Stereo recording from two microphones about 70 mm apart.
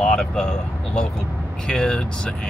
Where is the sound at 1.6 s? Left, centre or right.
Centre.